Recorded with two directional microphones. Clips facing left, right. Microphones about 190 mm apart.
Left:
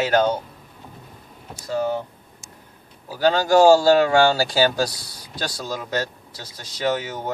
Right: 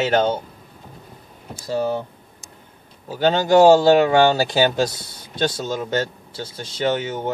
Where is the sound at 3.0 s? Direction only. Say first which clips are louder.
Right 1 dB; 25° right (ahead or behind).